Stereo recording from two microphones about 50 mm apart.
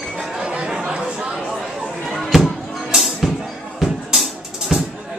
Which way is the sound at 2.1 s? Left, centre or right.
Centre.